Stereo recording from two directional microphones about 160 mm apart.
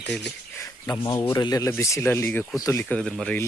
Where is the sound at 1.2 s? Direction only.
25° left (ahead or behind).